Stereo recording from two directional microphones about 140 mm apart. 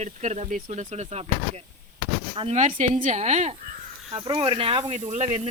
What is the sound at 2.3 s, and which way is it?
Speech, 40° right (ahead or behind).